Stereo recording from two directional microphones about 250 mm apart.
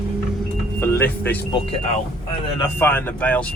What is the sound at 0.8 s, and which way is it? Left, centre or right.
Speech, centre.